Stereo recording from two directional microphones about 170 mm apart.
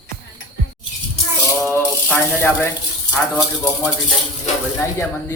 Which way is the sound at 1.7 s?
10° left (ahead or behind).